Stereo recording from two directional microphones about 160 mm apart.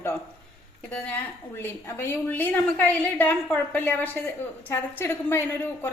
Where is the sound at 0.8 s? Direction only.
10° left (ahead or behind).